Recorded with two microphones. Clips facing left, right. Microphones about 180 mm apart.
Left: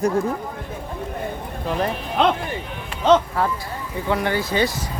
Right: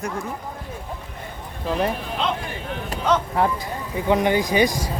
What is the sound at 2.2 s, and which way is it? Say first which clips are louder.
Speech: left 7 dB; 65° left (ahead or behind).